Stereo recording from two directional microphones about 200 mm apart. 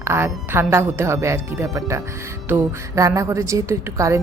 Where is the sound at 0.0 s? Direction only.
10° right (ahead or behind).